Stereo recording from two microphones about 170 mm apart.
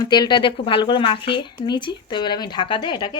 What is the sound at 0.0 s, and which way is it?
Speech, 25° left (ahead or behind).